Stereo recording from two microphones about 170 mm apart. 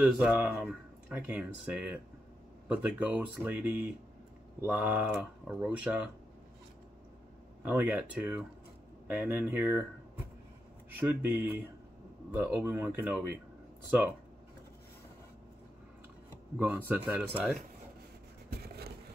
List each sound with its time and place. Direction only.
0.0 s speech: 10° right (ahead or behind)
7.6 s speech: 10° right (ahead or behind)
11.0 s speech: 10° right (ahead or behind)
16.5 s speech: 10° right (ahead or behind)
18.5 s a sound: 70° right (ahead or behind)